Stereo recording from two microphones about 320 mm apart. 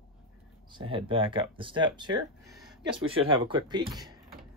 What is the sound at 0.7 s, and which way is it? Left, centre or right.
Speech, centre.